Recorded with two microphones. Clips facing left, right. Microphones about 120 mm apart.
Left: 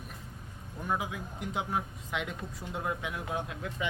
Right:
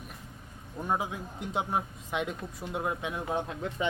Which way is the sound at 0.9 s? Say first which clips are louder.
Right 2 dB; 30° right (ahead or behind).